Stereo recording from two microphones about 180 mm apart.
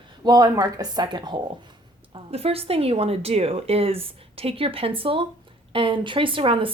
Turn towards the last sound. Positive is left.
turn(degrees=-30)  # may be behind; listen again after turning